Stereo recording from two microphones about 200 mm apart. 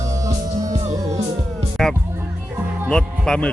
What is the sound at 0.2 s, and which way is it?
Music, 15° right (ahead or behind).